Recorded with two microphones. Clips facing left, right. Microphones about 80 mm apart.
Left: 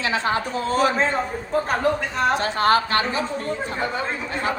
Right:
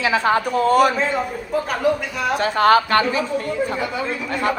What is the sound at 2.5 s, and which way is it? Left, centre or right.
Speech, right.